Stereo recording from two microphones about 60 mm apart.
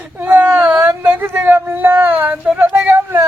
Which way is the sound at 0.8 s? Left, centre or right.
Right.